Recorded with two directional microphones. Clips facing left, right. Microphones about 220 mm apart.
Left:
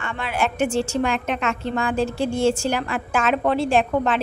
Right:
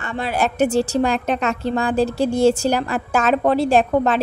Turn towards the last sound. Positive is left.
turn(degrees=-40)  # may be behind; listen again after turning